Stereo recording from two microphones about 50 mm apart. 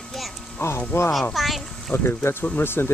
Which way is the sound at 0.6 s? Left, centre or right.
Left.